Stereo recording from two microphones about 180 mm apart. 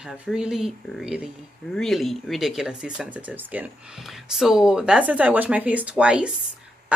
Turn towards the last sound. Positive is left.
turn(degrees=-5)  # may be behind; listen again after turning